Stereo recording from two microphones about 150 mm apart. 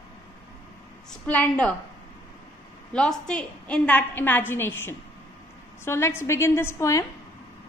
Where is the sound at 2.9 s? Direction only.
5° left (ahead or behind).